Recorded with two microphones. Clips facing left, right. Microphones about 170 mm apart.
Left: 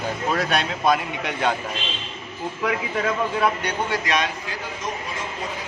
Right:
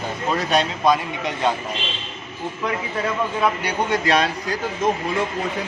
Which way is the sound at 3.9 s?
30° right (ahead or behind).